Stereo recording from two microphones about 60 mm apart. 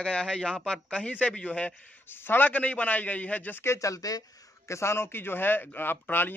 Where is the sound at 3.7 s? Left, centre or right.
Left.